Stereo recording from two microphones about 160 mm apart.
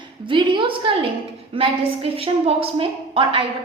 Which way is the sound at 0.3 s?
30° right (ahead or behind).